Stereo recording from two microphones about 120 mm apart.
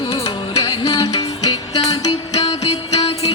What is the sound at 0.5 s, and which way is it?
Music, 50° left (ahead or behind).